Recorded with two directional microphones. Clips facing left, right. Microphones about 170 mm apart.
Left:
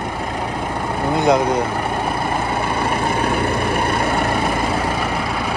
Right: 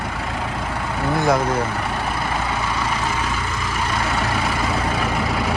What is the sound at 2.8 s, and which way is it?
Vehicle, 60° left (ahead or behind).